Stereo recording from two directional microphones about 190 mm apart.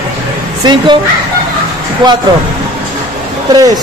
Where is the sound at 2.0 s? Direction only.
25° right (ahead or behind).